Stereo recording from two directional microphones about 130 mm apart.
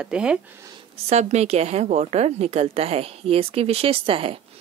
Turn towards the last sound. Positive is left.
turn(degrees=-45)  # may be behind; listen again after turning